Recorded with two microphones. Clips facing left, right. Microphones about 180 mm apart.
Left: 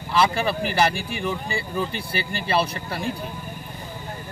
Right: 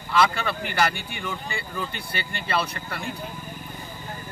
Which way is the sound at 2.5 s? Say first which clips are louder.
Left 4 dB; 30° left (ahead or behind).